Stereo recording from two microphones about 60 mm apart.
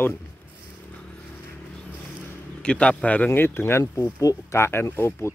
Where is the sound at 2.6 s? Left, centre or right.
Centre.